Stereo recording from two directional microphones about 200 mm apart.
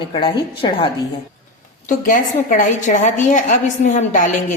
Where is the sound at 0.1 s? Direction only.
25° left (ahead or behind).